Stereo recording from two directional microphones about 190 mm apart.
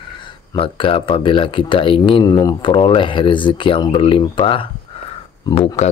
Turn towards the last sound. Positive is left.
turn(degrees=30)  # may be behind; listen again after turning